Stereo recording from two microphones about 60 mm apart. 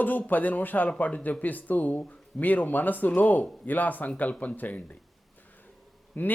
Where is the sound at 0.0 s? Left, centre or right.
Left.